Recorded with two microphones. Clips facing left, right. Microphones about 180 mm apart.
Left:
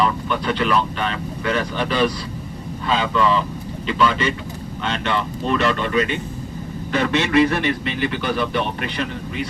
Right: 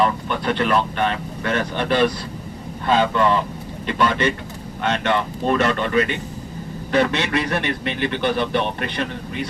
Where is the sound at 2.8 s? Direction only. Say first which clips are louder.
Right 2 dB; 50° right (ahead or behind).